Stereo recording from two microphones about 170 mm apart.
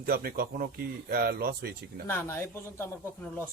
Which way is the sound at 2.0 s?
15° left (ahead or behind).